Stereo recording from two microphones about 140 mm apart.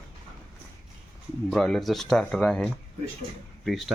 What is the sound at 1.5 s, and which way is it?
Speech, centre (ahead or behind).